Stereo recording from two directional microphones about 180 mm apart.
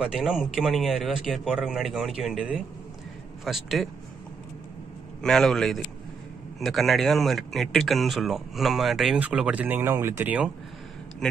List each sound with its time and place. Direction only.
0.0 s speech: centre (ahead or behind)
5.2 s speech: centre (ahead or behind)